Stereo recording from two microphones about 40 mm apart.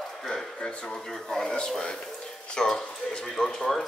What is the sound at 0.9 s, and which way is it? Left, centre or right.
Speech, centre.